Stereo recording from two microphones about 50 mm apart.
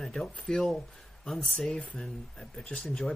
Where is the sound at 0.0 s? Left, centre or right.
Centre.